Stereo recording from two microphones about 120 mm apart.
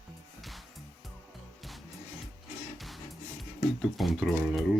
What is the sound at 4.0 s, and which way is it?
Speech, centre (ahead or behind).